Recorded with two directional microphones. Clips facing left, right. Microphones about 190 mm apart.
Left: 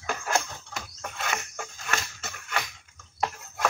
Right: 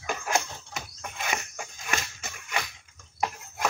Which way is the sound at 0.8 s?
15° right (ahead or behind).